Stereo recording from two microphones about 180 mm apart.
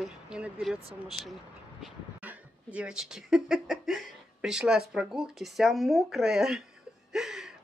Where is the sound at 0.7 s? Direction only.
35° right (ahead or behind).